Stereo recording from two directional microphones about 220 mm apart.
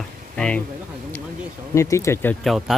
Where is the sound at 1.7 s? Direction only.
15° left (ahead or behind).